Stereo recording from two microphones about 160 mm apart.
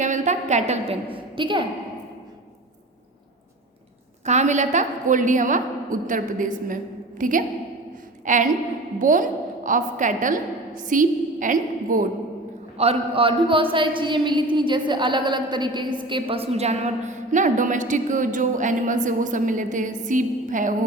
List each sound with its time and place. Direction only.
0.0 s a woman's voice: 50° right (ahead or behind)
1.1 s a woman's voice: 30° right (ahead or behind)
4.3 s a woman's voice: 45° right (ahead or behind)
12.7 s a man's voice: 40° right (ahead or behind)